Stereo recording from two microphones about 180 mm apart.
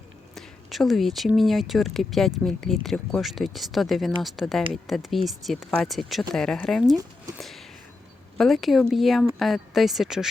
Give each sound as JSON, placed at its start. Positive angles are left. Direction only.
{"t": 0.3, "sound": "speech", "side_deg": 0}